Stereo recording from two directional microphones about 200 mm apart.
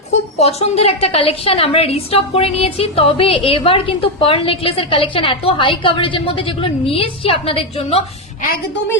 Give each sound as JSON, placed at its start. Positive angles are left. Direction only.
{"t": 0.3, "sound": "a woman's voice", "side_deg": 30}